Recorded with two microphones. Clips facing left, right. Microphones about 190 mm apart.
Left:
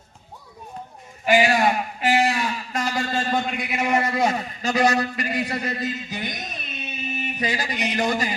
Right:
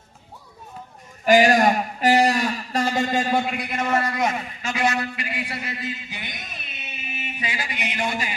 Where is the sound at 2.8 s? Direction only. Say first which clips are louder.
Right 3 dB; 20° right (ahead or behind).